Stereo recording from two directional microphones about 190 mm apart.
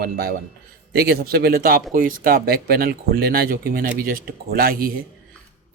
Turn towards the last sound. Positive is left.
turn(degrees=-50)  # may be behind; listen again after turning